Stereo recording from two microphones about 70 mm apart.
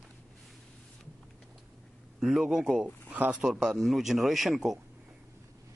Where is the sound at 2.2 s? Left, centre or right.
Centre.